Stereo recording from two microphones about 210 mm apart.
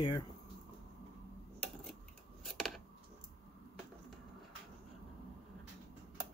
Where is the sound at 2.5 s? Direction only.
Centre (ahead or behind).